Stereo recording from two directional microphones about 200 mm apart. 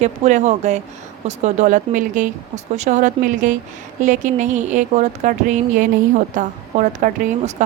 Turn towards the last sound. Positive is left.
turn(degrees=-40)  # may be behind; listen again after turning